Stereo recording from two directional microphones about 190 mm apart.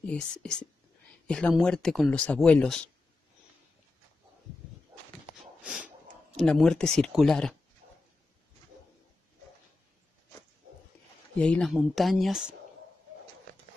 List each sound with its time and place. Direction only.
0.0 s speech: 5° left (ahead or behind)
5.6 s snort: 5° right (ahead or behind)
6.4 s speech: 5° left (ahead or behind)
7.8 s a sound: 45° right (ahead or behind)
11.3 s speech: 5° left (ahead or behind)